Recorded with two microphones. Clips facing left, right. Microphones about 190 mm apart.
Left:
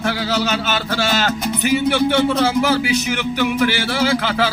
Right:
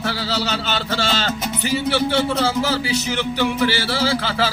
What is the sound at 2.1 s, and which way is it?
Speech, 15° left (ahead or behind).